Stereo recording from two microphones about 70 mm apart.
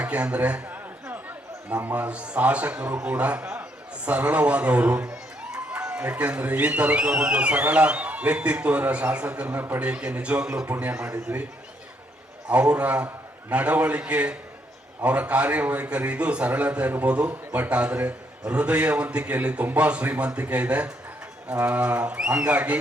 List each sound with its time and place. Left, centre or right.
0.0 s a sound: centre
1.7 s a man's voice: right
4.1 s a man's voice: right
9.9 s a man's voice: centre
12.5 s a man's voice: centre